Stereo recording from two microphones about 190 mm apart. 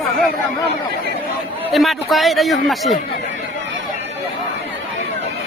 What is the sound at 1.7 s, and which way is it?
A man's voice, centre (ahead or behind).